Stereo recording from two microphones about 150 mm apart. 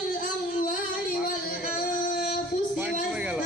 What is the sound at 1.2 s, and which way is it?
Singing, 75° left (ahead or behind).